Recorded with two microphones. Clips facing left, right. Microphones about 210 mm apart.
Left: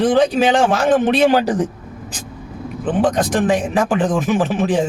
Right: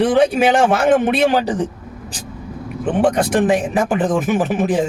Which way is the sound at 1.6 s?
30° right (ahead or behind).